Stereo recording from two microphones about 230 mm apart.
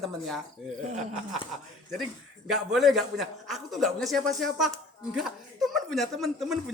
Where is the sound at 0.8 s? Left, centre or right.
Right.